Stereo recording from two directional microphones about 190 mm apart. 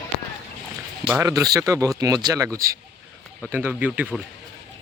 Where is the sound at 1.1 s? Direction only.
20° right (ahead or behind).